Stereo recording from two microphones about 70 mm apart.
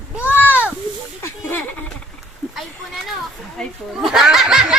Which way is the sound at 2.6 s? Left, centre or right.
Centre.